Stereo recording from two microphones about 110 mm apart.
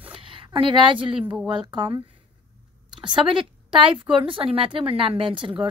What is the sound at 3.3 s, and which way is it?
A woman's voice, 50° right (ahead or behind).